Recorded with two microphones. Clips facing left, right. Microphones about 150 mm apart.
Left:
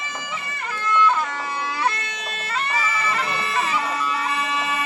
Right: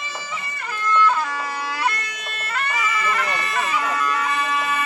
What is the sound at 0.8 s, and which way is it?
Music, 20° left (ahead or behind).